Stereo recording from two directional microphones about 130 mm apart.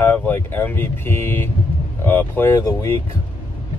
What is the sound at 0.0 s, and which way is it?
Speech, 15° left (ahead or behind).